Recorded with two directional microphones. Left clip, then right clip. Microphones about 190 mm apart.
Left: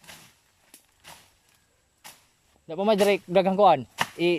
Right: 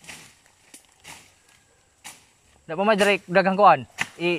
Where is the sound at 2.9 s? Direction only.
10° right (ahead or behind).